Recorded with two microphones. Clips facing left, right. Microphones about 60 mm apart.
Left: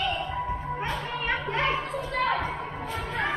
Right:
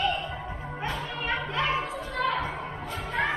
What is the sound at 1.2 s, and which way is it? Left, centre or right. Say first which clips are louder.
Music: left 1 dB; left.